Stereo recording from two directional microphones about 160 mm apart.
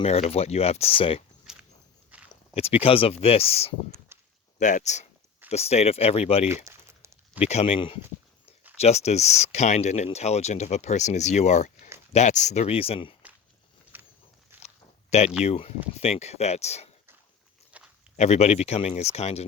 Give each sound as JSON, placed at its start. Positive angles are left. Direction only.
{"t": 0.0, "sound": "speech", "side_deg": 40}
{"t": 2.0, "sound": "walk", "side_deg": -10}
{"t": 2.6, "sound": "speech", "side_deg": 40}
{"t": 4.1, "sound": "a sound", "side_deg": -15}
{"t": 4.5, "sound": "speech", "side_deg": 50}
{"t": 6.7, "sound": "a sound", "side_deg": -15}
{"t": 7.4, "sound": "speech", "side_deg": 40}
{"t": 13.9, "sound": "walk", "side_deg": -10}
{"t": 15.1, "sound": "speech", "side_deg": 45}
{"t": 17.7, "sound": "walk", "side_deg": -10}
{"t": 18.2, "sound": "speech", "side_deg": 45}